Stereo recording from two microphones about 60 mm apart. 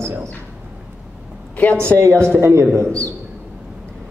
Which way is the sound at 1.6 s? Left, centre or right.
Left.